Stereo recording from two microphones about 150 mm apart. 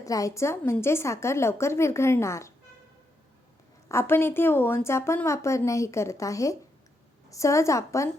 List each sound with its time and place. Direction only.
0.0 s a woman's voice: 20° left (ahead or behind)
3.8 s a woman's voice: 15° left (ahead or behind)